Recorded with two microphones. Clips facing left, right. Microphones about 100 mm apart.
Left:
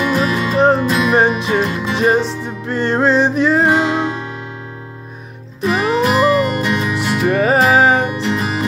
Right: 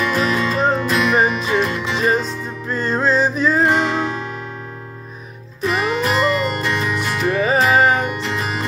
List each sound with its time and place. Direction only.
0.0 s music: 20° left (ahead or behind)
2.6 s music: 70° left (ahead or behind)
3.6 s music: 15° left (ahead or behind)
5.6 s music: 15° left (ahead or behind)
7.3 s music: 60° left (ahead or behind)
8.0 s music: 25° left (ahead or behind)